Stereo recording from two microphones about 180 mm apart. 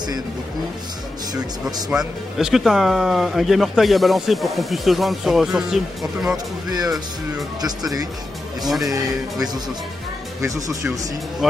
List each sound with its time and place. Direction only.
1.9 s speech: 5° right (ahead or behind)
6.3 s speech: 20° right (ahead or behind)
8.6 s speech: centre (ahead or behind)
8.9 s speech: 20° right (ahead or behind)